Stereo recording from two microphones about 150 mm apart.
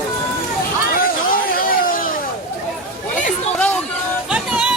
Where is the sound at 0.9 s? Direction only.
70° left (ahead or behind).